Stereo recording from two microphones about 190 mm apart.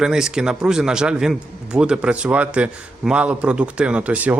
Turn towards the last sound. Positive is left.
turn(degrees=-10)  # may be behind; listen again after turning